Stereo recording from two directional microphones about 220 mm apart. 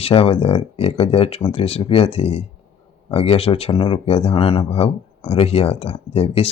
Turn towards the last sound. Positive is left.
turn(degrees=25)  # may be behind; listen again after turning